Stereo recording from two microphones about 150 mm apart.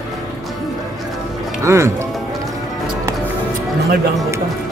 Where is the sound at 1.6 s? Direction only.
20° right (ahead or behind).